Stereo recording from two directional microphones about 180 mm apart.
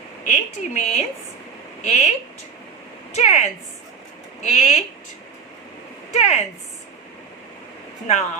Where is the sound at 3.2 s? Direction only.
40° left (ahead or behind).